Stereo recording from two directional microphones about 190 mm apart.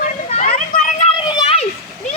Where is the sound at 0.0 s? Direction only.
40° left (ahead or behind).